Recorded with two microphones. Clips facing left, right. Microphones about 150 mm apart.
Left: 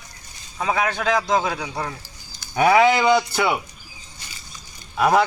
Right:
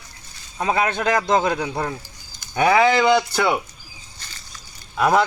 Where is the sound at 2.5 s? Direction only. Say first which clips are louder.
Left 1 dB; 5° left (ahead or behind).